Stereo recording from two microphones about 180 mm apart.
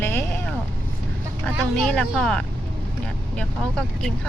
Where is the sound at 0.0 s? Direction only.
15° left (ahead or behind).